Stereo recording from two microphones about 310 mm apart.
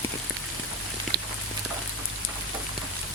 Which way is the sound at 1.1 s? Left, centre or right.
Right.